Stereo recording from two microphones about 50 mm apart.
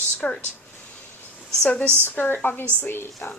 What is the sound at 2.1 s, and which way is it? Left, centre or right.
Speech, left.